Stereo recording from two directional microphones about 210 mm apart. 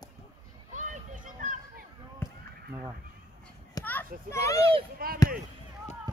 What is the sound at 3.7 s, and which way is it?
Children playing, 10° left (ahead or behind).